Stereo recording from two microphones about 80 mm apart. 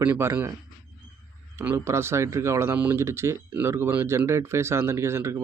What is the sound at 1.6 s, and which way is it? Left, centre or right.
Speech, right.